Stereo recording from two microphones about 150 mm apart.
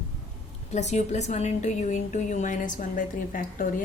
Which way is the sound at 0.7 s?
50° left (ahead or behind).